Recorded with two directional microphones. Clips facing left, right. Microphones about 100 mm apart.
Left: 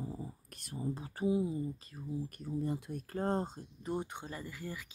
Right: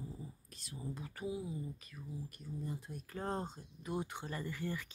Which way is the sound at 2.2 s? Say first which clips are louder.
Left 8 dB; 55° left (ahead or behind).